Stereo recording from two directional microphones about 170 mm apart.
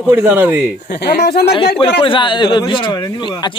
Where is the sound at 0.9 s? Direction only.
65° left (ahead or behind).